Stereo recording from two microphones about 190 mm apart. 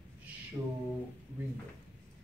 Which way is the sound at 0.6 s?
15° right (ahead or behind).